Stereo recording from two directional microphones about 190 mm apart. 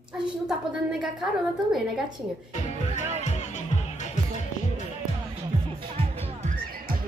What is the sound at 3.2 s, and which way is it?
Music, 40° left (ahead or behind).